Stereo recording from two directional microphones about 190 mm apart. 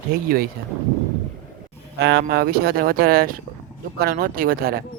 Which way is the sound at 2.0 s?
60° right (ahead or behind).